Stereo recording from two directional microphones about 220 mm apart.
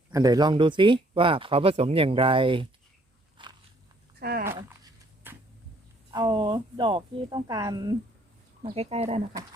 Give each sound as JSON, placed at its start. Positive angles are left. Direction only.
{"t": 0.1, "sound": "speech", "side_deg": -15}
{"t": 3.4, "sound": "biting", "side_deg": -20}
{"t": 4.2, "sound": "dog", "side_deg": -45}
{"t": 5.2, "sound": "a sound", "side_deg": -10}
{"t": 6.1, "sound": "speech", "side_deg": -20}